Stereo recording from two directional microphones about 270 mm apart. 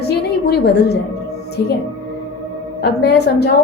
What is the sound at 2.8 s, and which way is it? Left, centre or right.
Speech, left.